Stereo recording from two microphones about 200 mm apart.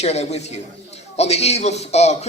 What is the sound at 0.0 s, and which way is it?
A man's voice, 35° left (ahead or behind).